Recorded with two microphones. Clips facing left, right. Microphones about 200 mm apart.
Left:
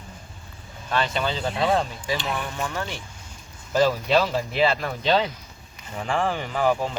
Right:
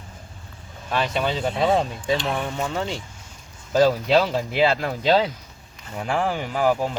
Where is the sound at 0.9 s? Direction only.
10° right (ahead or behind).